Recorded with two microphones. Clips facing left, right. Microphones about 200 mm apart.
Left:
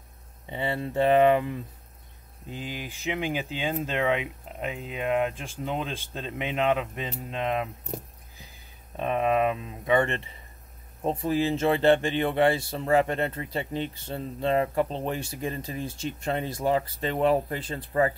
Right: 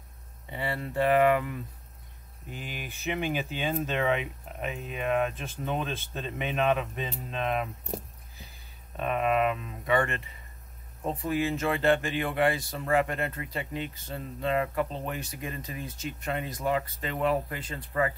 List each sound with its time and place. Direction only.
0.5 s speech: 25° left (ahead or behind)
8.9 s speech: 20° left (ahead or behind)